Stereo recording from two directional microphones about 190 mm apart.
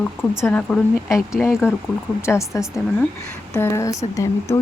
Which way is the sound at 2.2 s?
15° left (ahead or behind).